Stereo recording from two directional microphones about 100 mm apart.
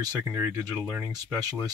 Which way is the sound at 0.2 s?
30° right (ahead or behind).